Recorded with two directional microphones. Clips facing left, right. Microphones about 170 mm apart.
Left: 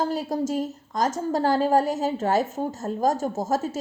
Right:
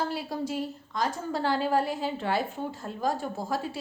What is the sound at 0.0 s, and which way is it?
A woman's voice, 40° left (ahead or behind).